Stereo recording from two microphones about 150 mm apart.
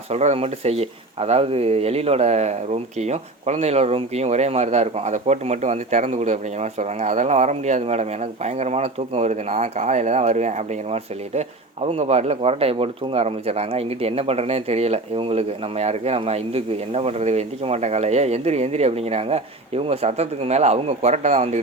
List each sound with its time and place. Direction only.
0.1 s speech: 45° right (ahead or behind)